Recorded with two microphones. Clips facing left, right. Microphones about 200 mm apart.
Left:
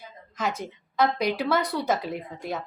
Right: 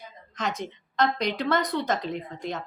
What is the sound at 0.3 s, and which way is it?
A woman's voice, 5° left (ahead or behind).